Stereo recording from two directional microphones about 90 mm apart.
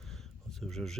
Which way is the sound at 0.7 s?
5° left (ahead or behind).